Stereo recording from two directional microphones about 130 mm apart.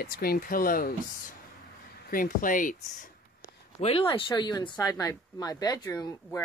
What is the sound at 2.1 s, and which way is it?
Speech, 90° left.